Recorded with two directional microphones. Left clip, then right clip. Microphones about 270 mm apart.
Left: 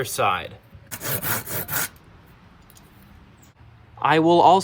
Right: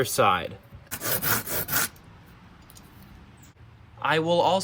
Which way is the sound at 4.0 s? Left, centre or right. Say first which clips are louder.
Left 6 dB; left.